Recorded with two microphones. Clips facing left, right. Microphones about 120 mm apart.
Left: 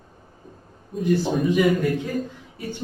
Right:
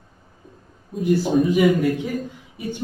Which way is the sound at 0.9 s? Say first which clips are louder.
Right 3 dB; centre (ahead or behind).